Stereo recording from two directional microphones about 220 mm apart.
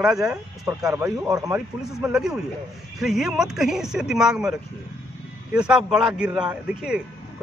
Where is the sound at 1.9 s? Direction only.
Centre (ahead or behind).